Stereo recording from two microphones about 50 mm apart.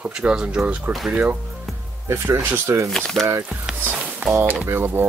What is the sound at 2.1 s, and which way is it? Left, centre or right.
Speech, right.